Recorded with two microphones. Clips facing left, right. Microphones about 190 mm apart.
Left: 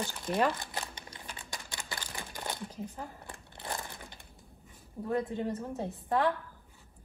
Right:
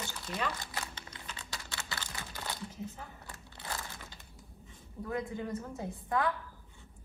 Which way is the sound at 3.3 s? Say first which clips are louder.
Left 3 dB; 20° left (ahead or behind).